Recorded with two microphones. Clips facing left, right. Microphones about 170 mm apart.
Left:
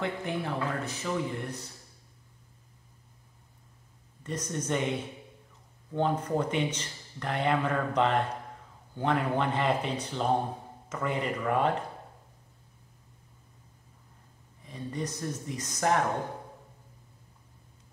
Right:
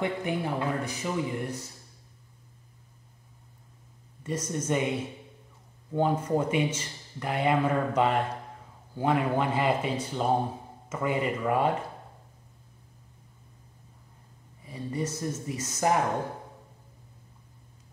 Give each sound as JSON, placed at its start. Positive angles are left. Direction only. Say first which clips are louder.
{"t": 0.0, "sound": "speech", "louder": "right 3 dB", "side_deg": -10}
{"t": 4.2, "sound": "speech", "louder": "right 3 dB", "side_deg": -10}
{"t": 14.6, "sound": "speech", "louder": "right 3 dB", "side_deg": -5}